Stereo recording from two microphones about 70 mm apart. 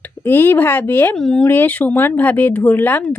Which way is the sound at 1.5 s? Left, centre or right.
Left.